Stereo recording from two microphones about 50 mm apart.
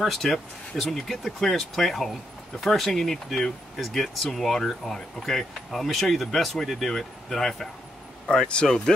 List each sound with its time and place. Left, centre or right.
0.0 s speech: centre
8.5 s speech: left